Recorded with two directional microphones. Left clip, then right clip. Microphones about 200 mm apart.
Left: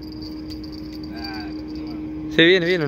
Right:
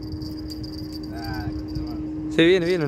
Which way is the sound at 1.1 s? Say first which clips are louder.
Left 1 dB; 15° right (ahead or behind).